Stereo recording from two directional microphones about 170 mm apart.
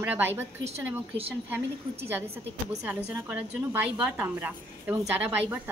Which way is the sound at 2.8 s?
10° right (ahead or behind).